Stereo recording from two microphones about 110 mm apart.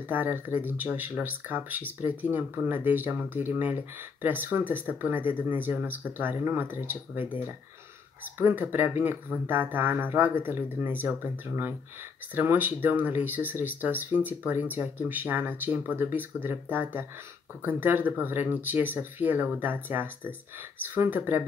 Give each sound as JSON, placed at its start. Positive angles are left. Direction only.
{"t": 0.1, "sound": "speech", "side_deg": -15}
{"t": 8.4, "sound": "speech", "side_deg": -20}